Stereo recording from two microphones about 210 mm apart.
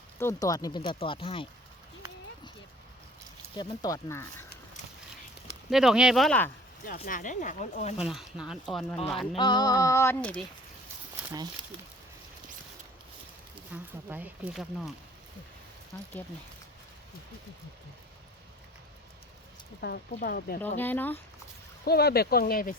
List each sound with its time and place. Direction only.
0.2 s speech: 15° left (ahead or behind)
3.6 s speech: 15° left (ahead or behind)
5.7 s speech: centre (ahead or behind)
6.8 s speech: 40° left (ahead or behind)
7.9 s speech: 5° right (ahead or behind)
9.3 s speech: 20° left (ahead or behind)
13.7 s speech: 10° right (ahead or behind)
15.9 s speech: 10° left (ahead or behind)
19.8 s speech: 50° left (ahead or behind)
20.7 s speech: 10° left (ahead or behind)
21.8 s speech: 50° left (ahead or behind)